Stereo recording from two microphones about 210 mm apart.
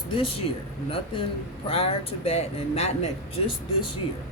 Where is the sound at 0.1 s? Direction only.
25° left (ahead or behind).